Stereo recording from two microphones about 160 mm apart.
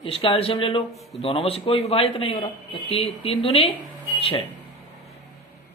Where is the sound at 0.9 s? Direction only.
Centre (ahead or behind).